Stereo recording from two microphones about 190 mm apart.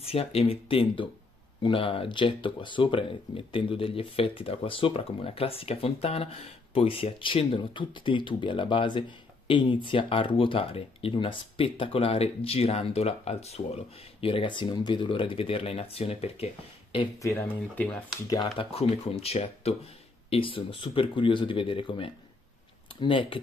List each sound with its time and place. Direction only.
0.0 s speech: 30° left (ahead or behind)
17.3 s speech: 10° left (ahead or behind)
18.3 s speech: 25° left (ahead or behind)